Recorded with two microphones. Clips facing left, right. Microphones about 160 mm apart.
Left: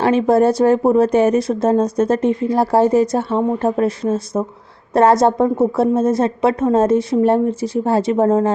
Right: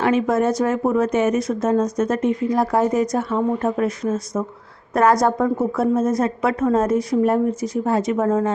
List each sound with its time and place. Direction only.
0.0 s a woman's voice: 30° left (ahead or behind)